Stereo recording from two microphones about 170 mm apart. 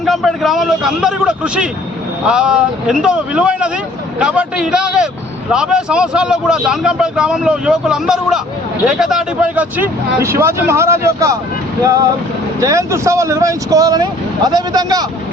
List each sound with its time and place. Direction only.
0.0 s speech: centre (ahead or behind); by 15.0 s 25° right (ahead or behind)